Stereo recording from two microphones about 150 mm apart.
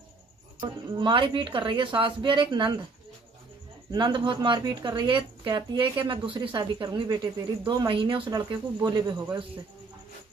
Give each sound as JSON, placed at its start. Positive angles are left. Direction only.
{"t": 0.6, "sound": "speech", "side_deg": -30}
{"t": 3.9, "sound": "speech", "side_deg": -30}